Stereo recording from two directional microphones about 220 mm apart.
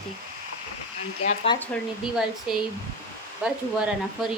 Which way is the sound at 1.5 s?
20° left (ahead or behind).